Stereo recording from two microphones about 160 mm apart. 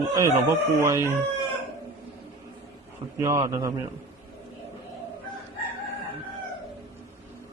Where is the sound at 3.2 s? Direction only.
20° right (ahead or behind).